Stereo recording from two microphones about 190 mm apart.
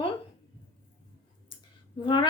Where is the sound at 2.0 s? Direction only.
25° left (ahead or behind).